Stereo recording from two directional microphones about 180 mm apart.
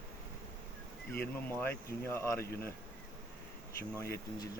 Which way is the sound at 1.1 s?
10° left (ahead or behind).